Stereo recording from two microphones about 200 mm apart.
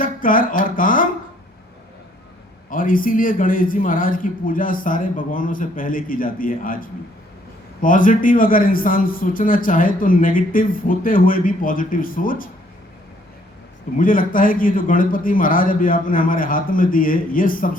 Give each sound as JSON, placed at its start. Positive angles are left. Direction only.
{"t": 0.0, "sound": "speech", "side_deg": 45}
{"t": 2.6, "sound": "a man's voice", "side_deg": 45}
{"t": 13.9, "sound": "a man's voice", "side_deg": 45}